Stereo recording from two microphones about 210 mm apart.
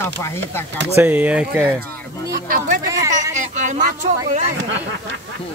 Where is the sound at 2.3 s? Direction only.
40° right (ahead or behind).